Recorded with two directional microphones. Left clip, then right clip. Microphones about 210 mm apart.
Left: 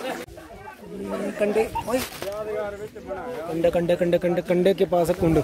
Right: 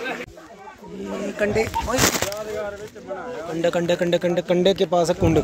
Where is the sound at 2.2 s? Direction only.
45° right (ahead or behind).